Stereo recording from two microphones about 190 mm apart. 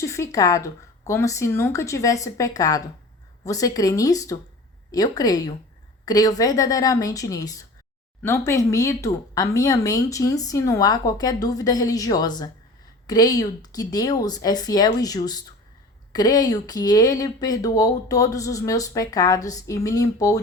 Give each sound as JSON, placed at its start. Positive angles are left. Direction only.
{"t": 0.0, "sound": "speech", "side_deg": 15}